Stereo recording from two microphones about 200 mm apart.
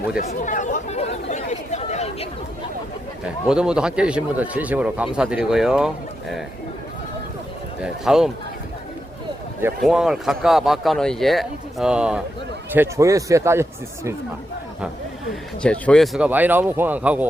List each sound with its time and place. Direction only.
0.2 s speech: 40° left (ahead or behind)
3.2 s speech: 5° right (ahead or behind)
7.8 s speech: 5° right (ahead or behind)
9.8 s speech: centre (ahead or behind)
15.6 s speech: 5° left (ahead or behind)